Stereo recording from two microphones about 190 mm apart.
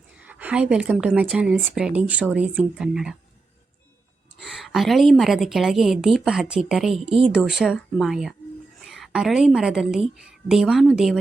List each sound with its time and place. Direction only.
0.3 s a woman's voice: 10° right (ahead or behind)
4.4 s a woman's voice: centre (ahead or behind)
7.0 s speech: 30° right (ahead or behind)
7.3 s a woman's voice: 5° right (ahead or behind)